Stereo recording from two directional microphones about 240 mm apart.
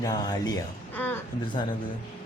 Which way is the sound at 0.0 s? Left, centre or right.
Centre.